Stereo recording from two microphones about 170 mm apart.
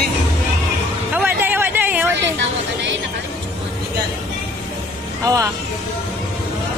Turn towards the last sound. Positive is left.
turn(degrees=-20)  # may be behind; listen again after turning